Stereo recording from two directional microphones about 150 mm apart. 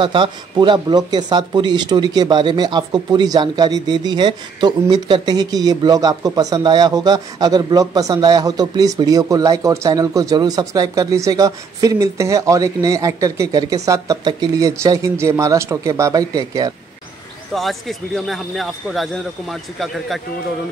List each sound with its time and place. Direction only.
0.0 s speech: 30° right (ahead or behind)
17.6 s speech: centre (ahead or behind)